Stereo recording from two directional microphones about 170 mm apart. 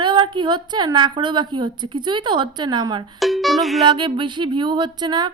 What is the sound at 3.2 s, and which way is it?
Speech, centre (ahead or behind).